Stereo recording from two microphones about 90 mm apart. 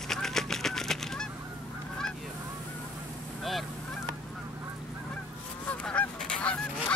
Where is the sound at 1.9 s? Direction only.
5° left (ahead or behind).